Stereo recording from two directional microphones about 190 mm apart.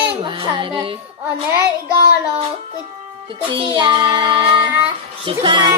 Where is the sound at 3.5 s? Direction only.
25° right (ahead or behind).